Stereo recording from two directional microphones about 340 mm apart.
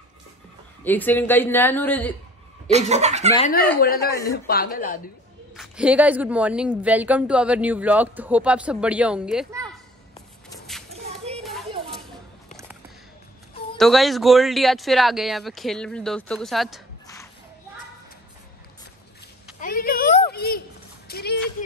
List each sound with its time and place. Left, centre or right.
0.8 s a woman's voice: centre
2.7 s speech: centre
3.3 s a woman's voice: left
5.6 s a woman's voice: centre
10.9 s a sound: centre
13.7 s a woman's voice: centre
19.6 s a sound: left